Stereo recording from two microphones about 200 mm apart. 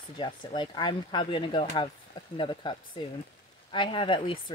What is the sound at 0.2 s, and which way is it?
Speech, 20° left (ahead or behind).